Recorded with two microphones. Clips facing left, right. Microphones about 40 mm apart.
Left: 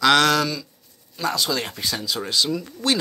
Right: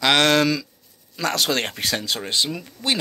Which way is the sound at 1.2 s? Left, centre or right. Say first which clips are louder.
Right 2 dB; right.